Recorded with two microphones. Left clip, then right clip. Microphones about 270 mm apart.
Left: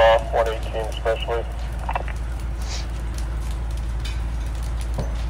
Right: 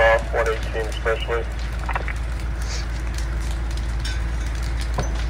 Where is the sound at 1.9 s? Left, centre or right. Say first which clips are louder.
Even; left.